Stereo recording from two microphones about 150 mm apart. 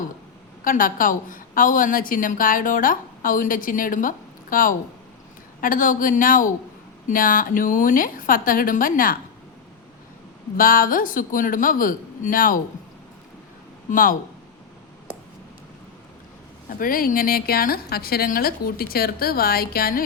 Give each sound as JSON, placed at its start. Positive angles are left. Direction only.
{"t": 0.6, "sound": "a woman's voice", "side_deg": 65}
{"t": 10.6, "sound": "a woman's voice", "side_deg": 70}
{"t": 13.9, "sound": "a woman's voice", "side_deg": 65}
{"t": 16.6, "sound": "a woman's voice", "side_deg": 70}